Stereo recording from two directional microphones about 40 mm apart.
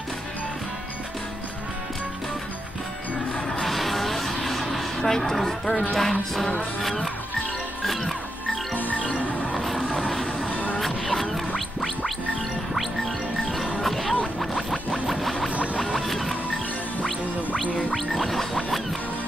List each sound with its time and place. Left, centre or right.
3.4 s music: centre
5.0 s speech: centre
6.8 s gargling: centre
7.8 s music: centre
8.7 s music: left
10.5 s music: left
10.8 s music: centre
13.8 s music: centre
17.9 s gargling: centre